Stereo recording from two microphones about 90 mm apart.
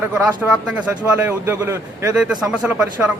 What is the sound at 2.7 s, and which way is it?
Speech, 15° right (ahead or behind).